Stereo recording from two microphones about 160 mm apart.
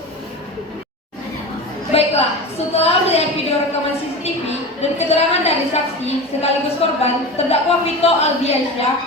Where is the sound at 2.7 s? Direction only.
40° left (ahead or behind).